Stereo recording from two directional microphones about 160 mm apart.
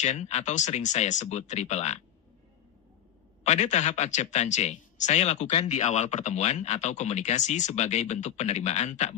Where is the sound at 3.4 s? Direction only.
45° left (ahead or behind).